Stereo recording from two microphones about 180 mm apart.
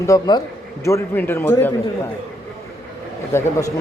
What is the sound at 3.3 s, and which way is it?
Speech, 15° left (ahead or behind).